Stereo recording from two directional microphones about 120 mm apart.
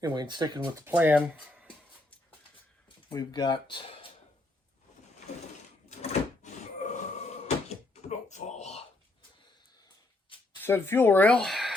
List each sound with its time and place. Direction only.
0.0 s speech: 35° right (ahead or behind)
0.9 s speech: 15° right (ahead or behind)
3.1 s speech: 35° left (ahead or behind)
5.9 s drawer open or close: 80° left
10.6 s speech: 20° left (ahead or behind); by 11.7 s centre (ahead or behind)